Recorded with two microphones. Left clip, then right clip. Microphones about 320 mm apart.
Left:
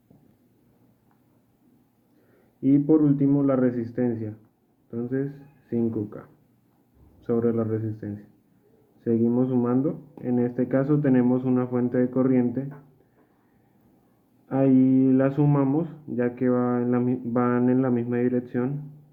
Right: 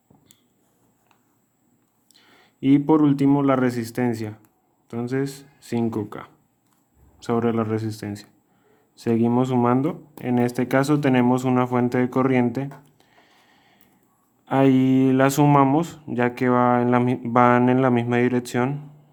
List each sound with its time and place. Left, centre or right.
2.6 s speech: right
14.4 s speech: right